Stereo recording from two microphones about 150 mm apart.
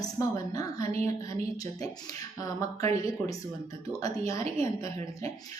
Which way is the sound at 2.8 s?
45° right (ahead or behind).